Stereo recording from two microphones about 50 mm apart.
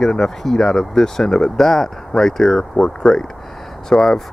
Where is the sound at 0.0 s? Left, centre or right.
Centre.